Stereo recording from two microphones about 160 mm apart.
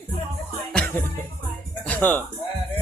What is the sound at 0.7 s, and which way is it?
Music, 10° left (ahead or behind).